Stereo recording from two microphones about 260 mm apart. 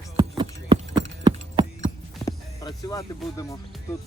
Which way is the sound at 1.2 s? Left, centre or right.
Centre.